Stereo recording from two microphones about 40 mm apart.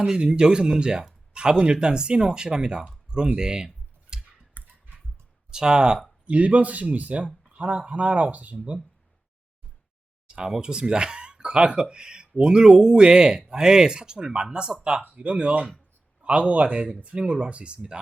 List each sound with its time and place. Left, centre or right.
0.0 s speech: right
4.1 s clicking: centre
4.6 s a sound: left
5.5 s speech: centre
6.2 s speech: right
10.2 s a sound: centre
10.6 s speech: right